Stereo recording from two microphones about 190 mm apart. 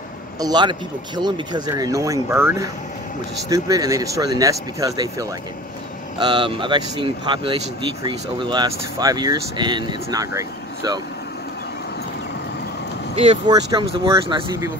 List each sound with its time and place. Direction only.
0.4 s speech: 20° right (ahead or behind)
13.1 s speech: 30° right (ahead or behind)